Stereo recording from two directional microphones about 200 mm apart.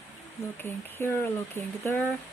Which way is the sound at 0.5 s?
10° left (ahead or behind).